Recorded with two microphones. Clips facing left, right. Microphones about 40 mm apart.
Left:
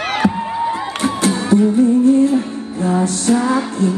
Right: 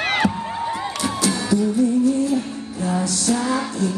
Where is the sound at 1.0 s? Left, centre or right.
Left.